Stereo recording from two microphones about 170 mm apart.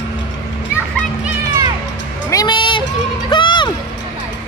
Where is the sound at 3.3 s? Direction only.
25° left (ahead or behind).